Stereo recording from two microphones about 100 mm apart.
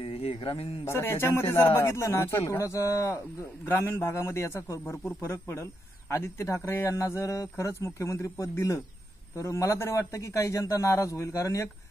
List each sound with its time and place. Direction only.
0.0 s mantra: 70° left (ahead or behind)
0.8 s a man's voice: 25° left (ahead or behind)